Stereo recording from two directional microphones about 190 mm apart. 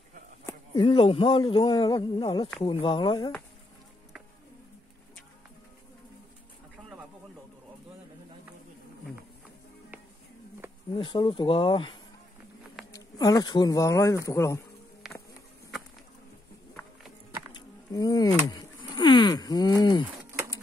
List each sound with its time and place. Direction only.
0.7 s speech: 30° left (ahead or behind)
10.9 s speech: 25° left (ahead or behind)
15.0 s music: centre (ahead or behind)
17.5 s a sound: 20° left (ahead or behind)